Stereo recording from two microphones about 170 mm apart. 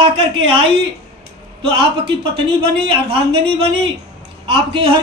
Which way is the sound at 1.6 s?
30° right (ahead or behind).